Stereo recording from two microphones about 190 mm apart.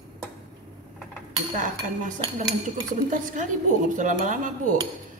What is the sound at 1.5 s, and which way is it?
Speech, 45° right (ahead or behind).